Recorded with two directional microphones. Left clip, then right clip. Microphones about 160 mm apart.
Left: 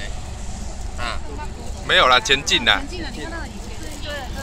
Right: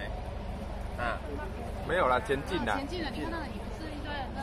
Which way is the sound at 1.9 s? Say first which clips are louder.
Left 13 dB; 15° left (ahead or behind).